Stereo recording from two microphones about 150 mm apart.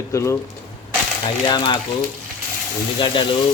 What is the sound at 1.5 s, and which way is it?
Frying, 30° left (ahead or behind).